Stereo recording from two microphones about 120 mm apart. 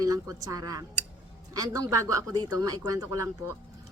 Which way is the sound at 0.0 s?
30° right (ahead or behind).